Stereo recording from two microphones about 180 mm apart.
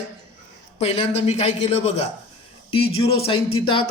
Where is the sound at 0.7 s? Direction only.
35° left (ahead or behind).